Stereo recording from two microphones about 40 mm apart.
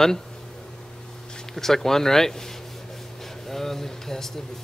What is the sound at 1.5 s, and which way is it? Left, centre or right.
Speech, centre.